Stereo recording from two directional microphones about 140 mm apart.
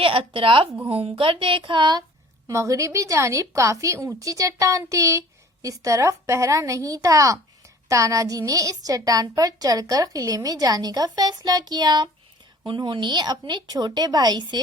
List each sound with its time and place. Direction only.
0.0 s a woman's voice: 40° right (ahead or behind)
2.5 s a woman's voice: 20° right (ahead or behind)